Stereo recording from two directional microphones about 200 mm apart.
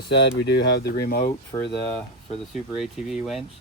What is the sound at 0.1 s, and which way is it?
Speech, 60° left (ahead or behind).